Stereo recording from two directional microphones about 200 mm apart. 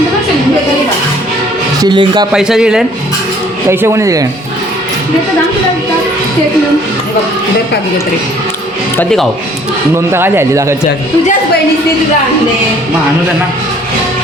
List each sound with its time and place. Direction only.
1.8 s speech: 20° right (ahead or behind)
2.3 s a man's voice: 5° right (ahead or behind)
9.9 s speech: 10° right (ahead or behind)